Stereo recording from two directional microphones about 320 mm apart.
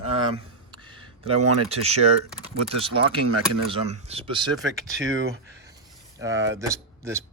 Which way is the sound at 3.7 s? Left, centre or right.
Centre.